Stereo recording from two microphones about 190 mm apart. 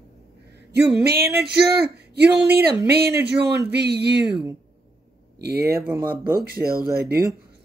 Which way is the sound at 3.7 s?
60° right (ahead or behind).